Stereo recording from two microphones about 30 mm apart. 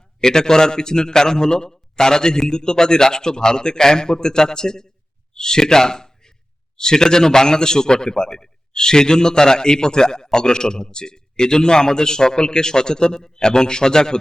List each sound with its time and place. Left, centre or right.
0.2 s a man's voice: left